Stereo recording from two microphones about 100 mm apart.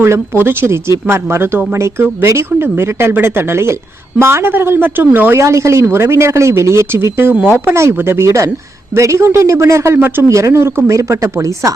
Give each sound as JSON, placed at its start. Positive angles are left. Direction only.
{"t": 0.0, "sound": "speech", "side_deg": -25}